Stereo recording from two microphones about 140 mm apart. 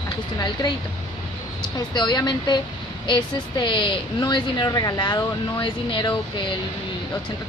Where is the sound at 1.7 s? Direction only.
30° left (ahead or behind).